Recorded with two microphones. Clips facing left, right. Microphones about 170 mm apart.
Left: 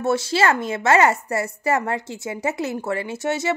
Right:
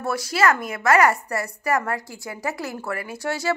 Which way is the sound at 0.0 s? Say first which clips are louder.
Left 2 dB; 25° left (ahead or behind).